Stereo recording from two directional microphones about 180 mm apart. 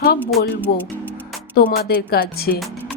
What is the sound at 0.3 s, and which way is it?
Speech, centre (ahead or behind).